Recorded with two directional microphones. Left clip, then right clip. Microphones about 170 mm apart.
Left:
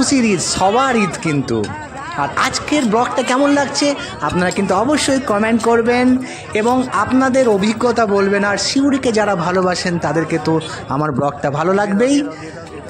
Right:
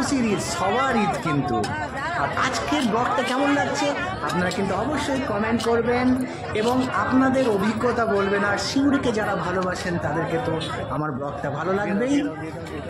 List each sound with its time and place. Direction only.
0.0 s a man's voice: 55° left (ahead or behind)
2.3 s speech: 50° left (ahead or behind)
4.9 s a man's voice: 70° left (ahead or behind)
11.0 s a man's voice: 60° left (ahead or behind)